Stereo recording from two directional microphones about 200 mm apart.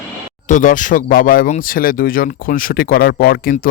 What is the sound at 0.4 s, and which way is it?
Speech, 40° left (ahead or behind).